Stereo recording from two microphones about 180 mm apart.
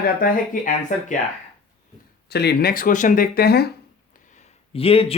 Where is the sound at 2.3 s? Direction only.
65° left (ahead or behind).